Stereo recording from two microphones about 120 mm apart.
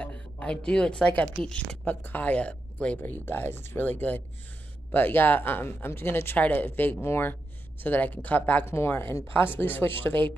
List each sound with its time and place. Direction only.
0.0 s a woman's voice: 10° left (ahead or behind)